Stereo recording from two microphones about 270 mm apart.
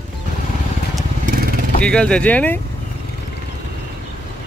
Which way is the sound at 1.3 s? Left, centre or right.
Right.